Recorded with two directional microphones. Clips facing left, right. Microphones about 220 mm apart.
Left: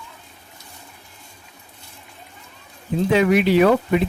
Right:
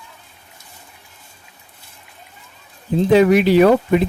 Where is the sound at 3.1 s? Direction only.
40° right (ahead or behind).